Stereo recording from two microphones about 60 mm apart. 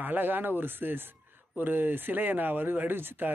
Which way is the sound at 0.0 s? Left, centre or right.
Right.